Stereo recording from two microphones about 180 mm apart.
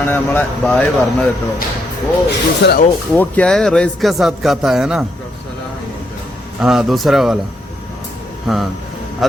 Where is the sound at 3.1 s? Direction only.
10° left (ahead or behind).